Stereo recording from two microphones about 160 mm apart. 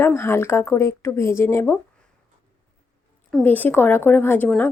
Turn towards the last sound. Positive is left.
turn(degrees=10)  # may be behind; listen again after turning